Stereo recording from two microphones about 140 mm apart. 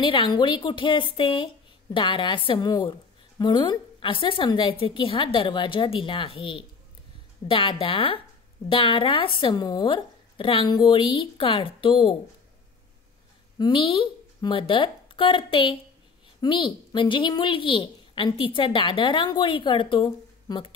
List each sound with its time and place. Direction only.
0.0 s a woman's voice: 35° left (ahead or behind)
13.6 s a woman's voice: 35° left (ahead or behind)